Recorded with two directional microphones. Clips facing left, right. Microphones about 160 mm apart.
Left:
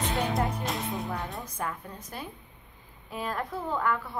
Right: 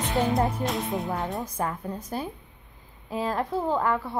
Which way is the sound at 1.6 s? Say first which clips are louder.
Right 5 dB; 35° right (ahead or behind).